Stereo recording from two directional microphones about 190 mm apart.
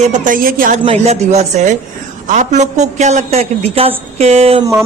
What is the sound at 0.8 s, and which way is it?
A man's voice, 30° right (ahead or behind).